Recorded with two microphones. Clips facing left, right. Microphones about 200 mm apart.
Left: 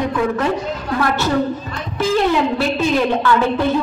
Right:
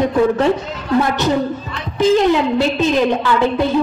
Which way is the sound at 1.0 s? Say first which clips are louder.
Right 2 dB; 20° right (ahead or behind).